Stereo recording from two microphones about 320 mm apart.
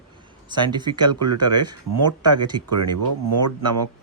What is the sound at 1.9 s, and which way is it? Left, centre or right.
Speech, right.